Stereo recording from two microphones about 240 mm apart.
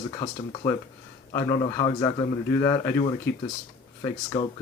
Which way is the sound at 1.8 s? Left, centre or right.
Centre.